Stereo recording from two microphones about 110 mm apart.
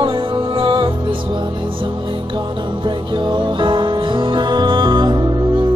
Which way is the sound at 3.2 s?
45° right (ahead or behind).